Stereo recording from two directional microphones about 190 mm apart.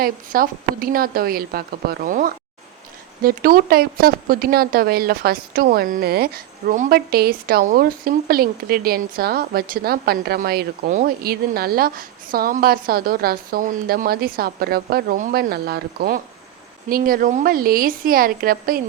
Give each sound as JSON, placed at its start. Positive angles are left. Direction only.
{"t": 0.0, "sound": "speech", "side_deg": -50}